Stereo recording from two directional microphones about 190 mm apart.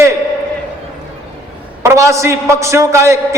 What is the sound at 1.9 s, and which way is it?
A man's voice, 15° right (ahead or behind).